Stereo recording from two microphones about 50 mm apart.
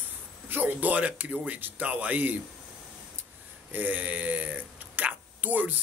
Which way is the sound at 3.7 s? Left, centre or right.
Right.